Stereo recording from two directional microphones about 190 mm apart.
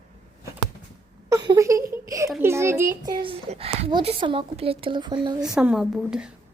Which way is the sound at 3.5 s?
30° right (ahead or behind).